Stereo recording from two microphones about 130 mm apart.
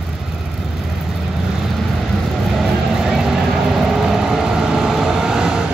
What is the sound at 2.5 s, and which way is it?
Vehicle, centre (ahead or behind).